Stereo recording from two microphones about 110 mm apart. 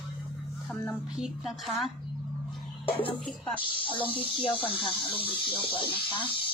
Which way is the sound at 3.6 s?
50° left (ahead or behind).